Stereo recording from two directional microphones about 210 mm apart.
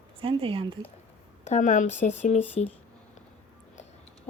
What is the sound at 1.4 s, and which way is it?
Speech, 35° left (ahead or behind).